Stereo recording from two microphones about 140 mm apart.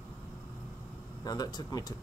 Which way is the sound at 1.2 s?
30° left (ahead or behind).